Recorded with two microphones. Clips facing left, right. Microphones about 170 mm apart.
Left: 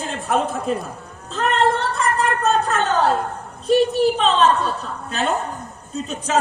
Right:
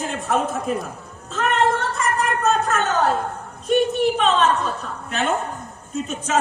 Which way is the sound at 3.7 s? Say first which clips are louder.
Left 2 dB; 30° left (ahead or behind).